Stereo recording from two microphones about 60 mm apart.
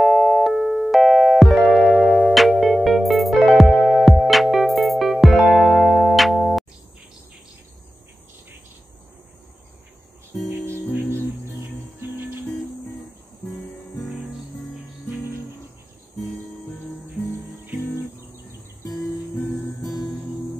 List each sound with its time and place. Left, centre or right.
0.0 s music: centre
10.5 s music: right
12.0 s music: right